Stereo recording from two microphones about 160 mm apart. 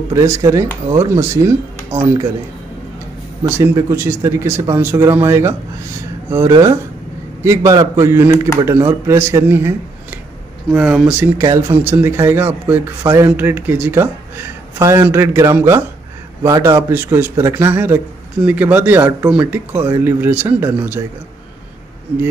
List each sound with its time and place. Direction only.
0.1 s speech: 20° right (ahead or behind)
3.4 s speech: 15° right (ahead or behind)
10.7 s speech: 5° right (ahead or behind)